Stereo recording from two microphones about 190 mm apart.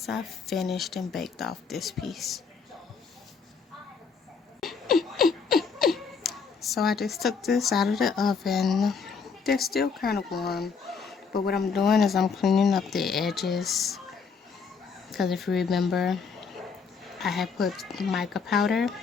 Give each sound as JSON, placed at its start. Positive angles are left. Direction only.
{"t": 0.0, "sound": "speech", "side_deg": 0}
{"t": 4.6, "sound": "a sound", "side_deg": 0}
{"t": 9.7, "sound": "speech", "side_deg": 55}
{"t": 10.6, "sound": "a sound", "side_deg": 0}
{"t": 11.3, "sound": "speech", "side_deg": 55}
{"t": 11.7, "sound": "speech", "side_deg": 0}
{"t": 15.1, "sound": "speech", "side_deg": 0}